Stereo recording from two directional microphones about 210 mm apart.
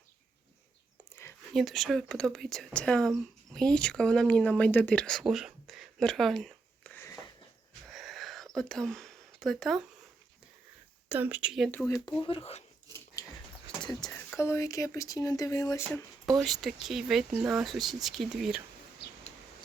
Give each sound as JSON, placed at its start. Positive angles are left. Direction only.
{"t": 1.5, "sound": "speech", "side_deg": 0}
{"t": 7.9, "sound": "wheeze", "side_deg": 0}
{"t": 8.5, "sound": "speech", "side_deg": 0}
{"t": 11.1, "sound": "speech", "side_deg": -10}
{"t": 11.9, "sound": "speech", "side_deg": 15}
{"t": 13.8, "sound": "speech", "side_deg": 20}
{"t": 16.4, "sound": "speech", "side_deg": 0}